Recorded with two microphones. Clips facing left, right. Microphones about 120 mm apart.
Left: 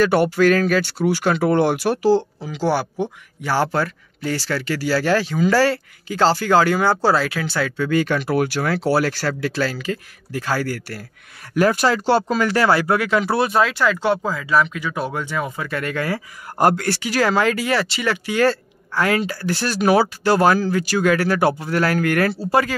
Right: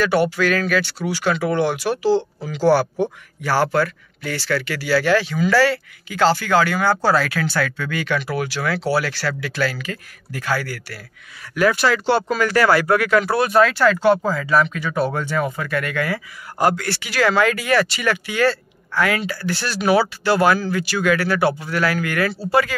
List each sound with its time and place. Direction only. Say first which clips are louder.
0.0 s speech: left 3 dB; 45° left (ahead or behind)
0.9 s speech: left 3 dB; 50° left (ahead or behind)
2.4 s speech: right 4 dB; 20° left (ahead or behind)
7.9 s speech: left 4 dB; 40° left (ahead or behind)
9.4 s speech: left 1 dB; 30° left (ahead or behind); by 15.7 s 15° left (ahead or behind)
15.7 s speech: left 2 dB; 35° left (ahead or behind)
16.5 s speech: left 2 dB; 50° left (ahead or behind)